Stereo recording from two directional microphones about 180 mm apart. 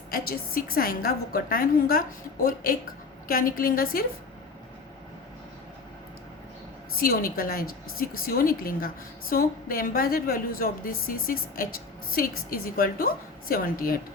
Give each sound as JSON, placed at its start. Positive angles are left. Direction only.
{"t": 0.1, "sound": "a woman's voice", "side_deg": 55}
{"t": 7.0, "sound": "a woman's voice", "side_deg": 55}